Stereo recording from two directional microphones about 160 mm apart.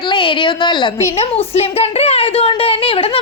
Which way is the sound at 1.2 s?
40° left (ahead or behind).